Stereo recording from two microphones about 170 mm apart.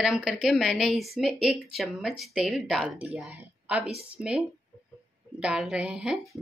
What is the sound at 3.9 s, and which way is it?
Speech, 35° right (ahead or behind).